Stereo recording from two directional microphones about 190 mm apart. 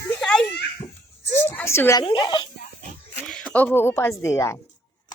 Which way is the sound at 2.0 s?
25° left (ahead or behind).